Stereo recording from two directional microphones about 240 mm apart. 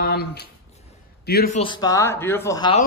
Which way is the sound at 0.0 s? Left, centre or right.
Left.